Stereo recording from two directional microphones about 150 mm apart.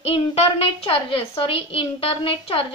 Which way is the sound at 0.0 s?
40° left (ahead or behind).